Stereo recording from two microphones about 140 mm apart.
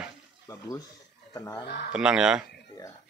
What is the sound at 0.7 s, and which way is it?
Speech, 25° left (ahead or behind).